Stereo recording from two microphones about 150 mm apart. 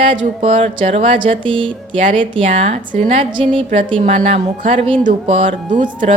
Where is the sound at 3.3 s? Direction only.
35° right (ahead or behind).